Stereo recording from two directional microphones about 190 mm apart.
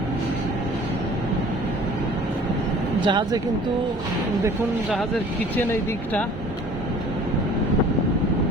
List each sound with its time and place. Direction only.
3.0 s speech: 25° right (ahead or behind)